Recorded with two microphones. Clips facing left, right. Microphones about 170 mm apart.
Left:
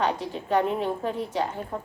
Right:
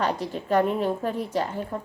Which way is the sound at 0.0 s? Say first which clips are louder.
Even; 40° right (ahead or behind).